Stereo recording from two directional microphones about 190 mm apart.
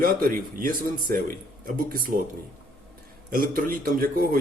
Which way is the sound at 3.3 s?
50° right (ahead or behind).